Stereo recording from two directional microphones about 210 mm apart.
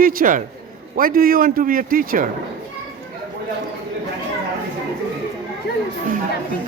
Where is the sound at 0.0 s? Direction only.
45° right (ahead or behind).